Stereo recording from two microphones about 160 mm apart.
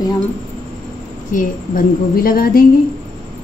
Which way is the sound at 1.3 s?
60° left (ahead or behind).